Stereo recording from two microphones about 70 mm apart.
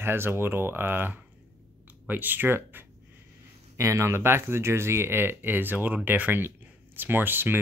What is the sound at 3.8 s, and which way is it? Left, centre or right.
Speech, right.